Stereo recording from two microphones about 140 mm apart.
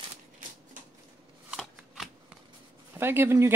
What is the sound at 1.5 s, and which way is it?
Shuffling cards, centre (ahead or behind).